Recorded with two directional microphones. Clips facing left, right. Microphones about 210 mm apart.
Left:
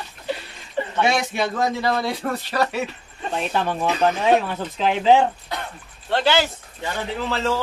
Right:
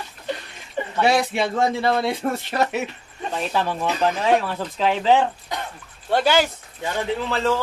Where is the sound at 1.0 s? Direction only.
30° right (ahead or behind).